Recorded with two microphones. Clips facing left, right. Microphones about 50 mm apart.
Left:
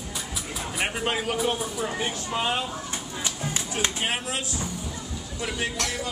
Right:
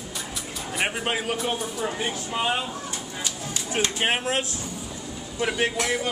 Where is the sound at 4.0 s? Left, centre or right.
Right.